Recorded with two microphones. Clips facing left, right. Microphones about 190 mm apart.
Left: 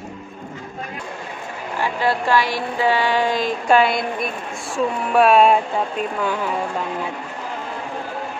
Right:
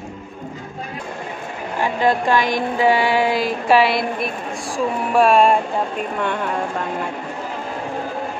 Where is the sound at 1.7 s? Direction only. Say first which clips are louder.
Right 3 dB; 15° right (ahead or behind); by 6.7 s 5° left (ahead or behind).